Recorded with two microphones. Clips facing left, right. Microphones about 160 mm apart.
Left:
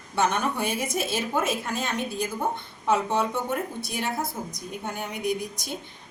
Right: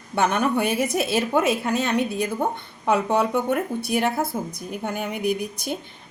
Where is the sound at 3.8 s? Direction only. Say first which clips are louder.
Right 7 dB; 55° right (ahead or behind).